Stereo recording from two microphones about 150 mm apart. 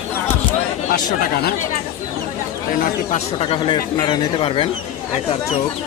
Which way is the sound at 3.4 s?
35° left (ahead or behind).